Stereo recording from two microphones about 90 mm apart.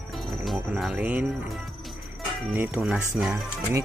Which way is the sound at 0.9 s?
15° right (ahead or behind).